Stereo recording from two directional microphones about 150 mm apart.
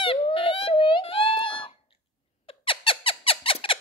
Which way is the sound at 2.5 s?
35° left (ahead or behind).